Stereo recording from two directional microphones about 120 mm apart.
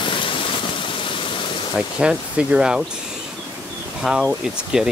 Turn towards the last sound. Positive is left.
turn(degrees=-5)  # may be behind; listen again after turning